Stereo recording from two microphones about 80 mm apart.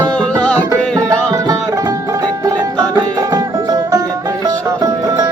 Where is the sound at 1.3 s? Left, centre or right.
Right.